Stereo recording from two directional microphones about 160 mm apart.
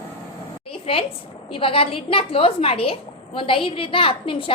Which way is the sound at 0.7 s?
35° left (ahead or behind).